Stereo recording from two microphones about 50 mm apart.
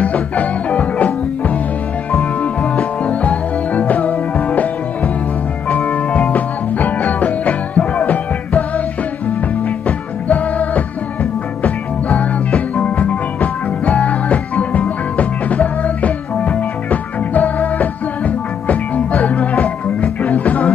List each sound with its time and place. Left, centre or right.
0.0 s music: left
9.8 s music: left